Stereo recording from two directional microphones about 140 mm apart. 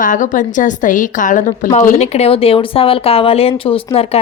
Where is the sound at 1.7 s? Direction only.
55° left (ahead or behind).